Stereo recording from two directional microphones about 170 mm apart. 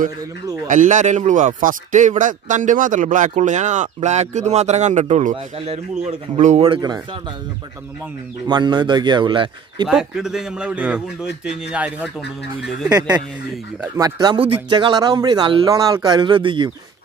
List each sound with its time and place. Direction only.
0.7 s speech: 50° right (ahead or behind); by 7.0 s 25° right (ahead or behind)
8.5 s speech: 25° right (ahead or behind)
9.8 s a man's voice: 5° right (ahead or behind)
13.9 s speech: 25° right (ahead or behind)